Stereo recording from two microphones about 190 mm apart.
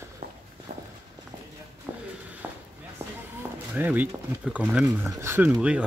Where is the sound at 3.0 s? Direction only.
15° right (ahead or behind).